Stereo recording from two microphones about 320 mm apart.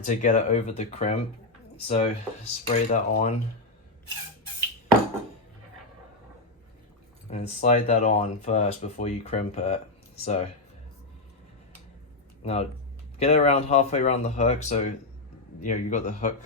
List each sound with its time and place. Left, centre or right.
0.0 s speech: left
7.3 s speech: centre
12.4 s speech: centre